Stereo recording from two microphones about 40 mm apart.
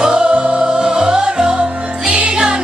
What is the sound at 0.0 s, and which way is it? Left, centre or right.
Music, right.